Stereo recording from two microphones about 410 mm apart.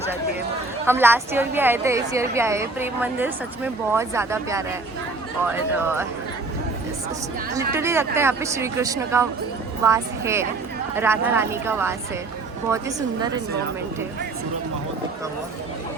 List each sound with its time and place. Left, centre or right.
0.9 s a woman's voice: centre
7.5 s a woman's voice: centre